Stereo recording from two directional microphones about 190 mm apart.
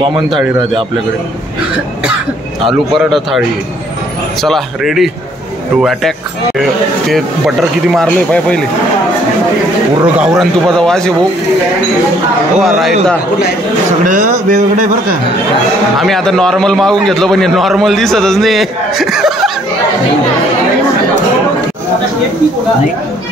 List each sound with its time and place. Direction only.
0.0 s a man's voice: 25° right (ahead or behind)
2.6 s a man's voice: centre (ahead or behind)
10.1 s a man's voice: 5° right (ahead or behind)
12.5 s a man's voice: centre (ahead or behind)
14.0 s a man's voice: 40° right (ahead or behind)
16.0 s a man's voice: centre (ahead or behind)